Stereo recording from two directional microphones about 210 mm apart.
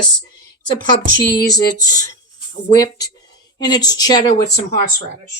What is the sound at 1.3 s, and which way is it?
A woman's voice, 15° left (ahead or behind).